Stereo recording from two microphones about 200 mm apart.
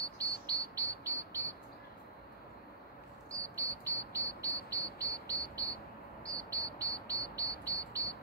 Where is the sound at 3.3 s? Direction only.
15° right (ahead or behind).